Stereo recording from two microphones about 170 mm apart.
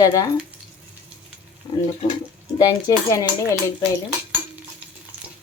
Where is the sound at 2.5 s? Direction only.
20° left (ahead or behind).